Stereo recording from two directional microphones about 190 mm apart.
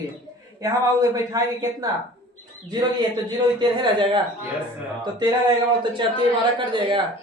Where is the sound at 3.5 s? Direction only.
25° right (ahead or behind).